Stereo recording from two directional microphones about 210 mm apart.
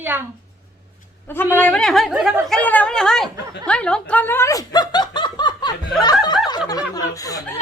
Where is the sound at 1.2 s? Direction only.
10° left (ahead or behind).